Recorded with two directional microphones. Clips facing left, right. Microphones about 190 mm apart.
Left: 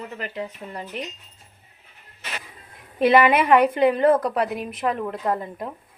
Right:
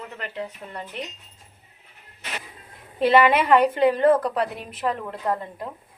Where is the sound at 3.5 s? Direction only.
10° left (ahead or behind).